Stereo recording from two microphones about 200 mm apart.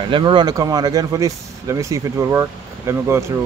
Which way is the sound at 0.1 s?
25° right (ahead or behind).